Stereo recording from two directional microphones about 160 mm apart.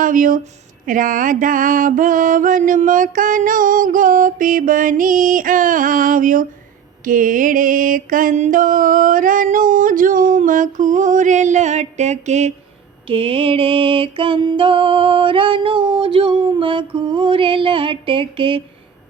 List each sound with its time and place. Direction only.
0.0 s speech: 55° right (ahead or behind)
0.9 s mantra: 55° right (ahead or behind)
13.1 s mantra: 35° right (ahead or behind)